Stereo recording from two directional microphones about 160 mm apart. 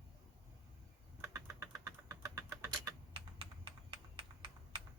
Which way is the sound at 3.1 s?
30° right (ahead or behind).